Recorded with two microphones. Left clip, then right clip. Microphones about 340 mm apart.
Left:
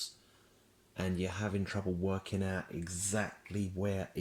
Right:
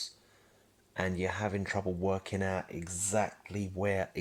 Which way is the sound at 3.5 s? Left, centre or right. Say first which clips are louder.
Right 2 dB; right.